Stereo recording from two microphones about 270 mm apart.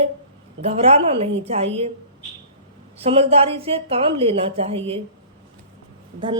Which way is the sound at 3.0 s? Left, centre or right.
Right.